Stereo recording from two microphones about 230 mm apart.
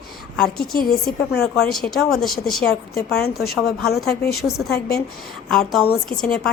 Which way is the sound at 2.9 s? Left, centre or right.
Left.